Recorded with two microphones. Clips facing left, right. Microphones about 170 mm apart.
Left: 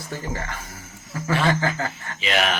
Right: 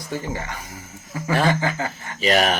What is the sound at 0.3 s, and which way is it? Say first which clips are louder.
Speech: right 1 dB; 15° right (ahead or behind).